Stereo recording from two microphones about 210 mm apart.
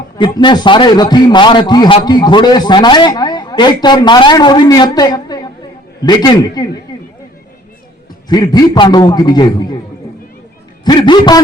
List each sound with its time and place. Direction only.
0.2 s a man's voice: 20° left (ahead or behind)
8.3 s a man's voice: 20° left (ahead or behind)
10.8 s a man's voice: 20° left (ahead or behind)